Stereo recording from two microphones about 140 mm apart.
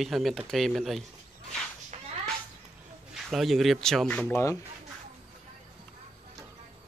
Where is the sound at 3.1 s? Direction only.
Centre (ahead or behind).